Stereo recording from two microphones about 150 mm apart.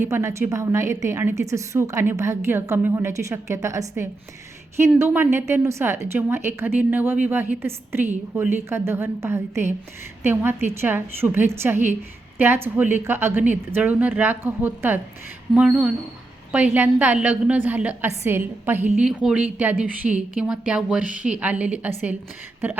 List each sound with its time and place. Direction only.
0.0 s a woman's voice: 20° right (ahead or behind)